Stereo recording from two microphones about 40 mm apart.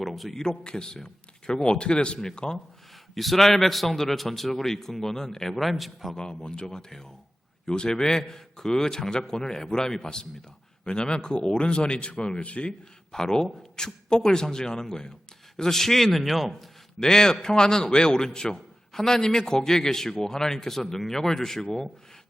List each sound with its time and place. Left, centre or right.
0.0 s a sound: centre
0.3 s a man's voice: left
3.2 s a man's voice: centre
5.5 s a man's voice: centre
6.1 s a man's voice: left
13.1 s a man's voice: centre
17.0 s a man's voice: centre